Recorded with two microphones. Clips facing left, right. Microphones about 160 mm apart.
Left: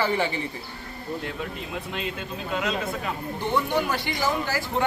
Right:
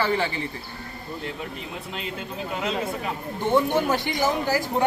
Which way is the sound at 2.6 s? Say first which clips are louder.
Right 2 dB; 25° right (ahead or behind).